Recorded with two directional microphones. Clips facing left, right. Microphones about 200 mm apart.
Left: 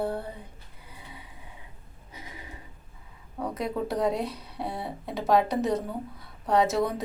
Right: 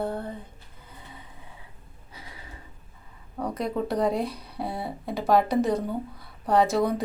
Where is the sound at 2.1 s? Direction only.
20° left (ahead or behind).